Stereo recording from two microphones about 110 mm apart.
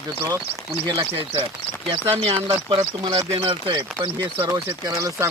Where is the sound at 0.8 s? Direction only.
50° right (ahead or behind); by 5.3 s 30° right (ahead or behind).